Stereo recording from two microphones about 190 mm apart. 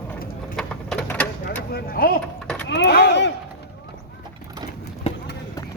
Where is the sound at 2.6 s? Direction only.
65° left (ahead or behind).